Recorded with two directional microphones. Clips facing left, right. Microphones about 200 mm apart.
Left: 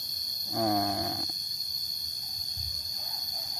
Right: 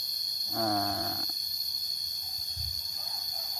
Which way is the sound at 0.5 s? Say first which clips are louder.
Left 3 dB; 15° left (ahead or behind).